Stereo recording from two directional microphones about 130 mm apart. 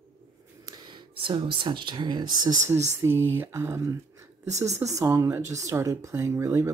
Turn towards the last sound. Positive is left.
turn(degrees=-20)  # may be behind; listen again after turning